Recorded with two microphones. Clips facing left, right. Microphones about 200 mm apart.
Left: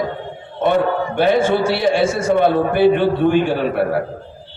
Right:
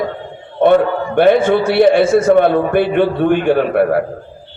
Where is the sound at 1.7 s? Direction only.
55° right (ahead or behind).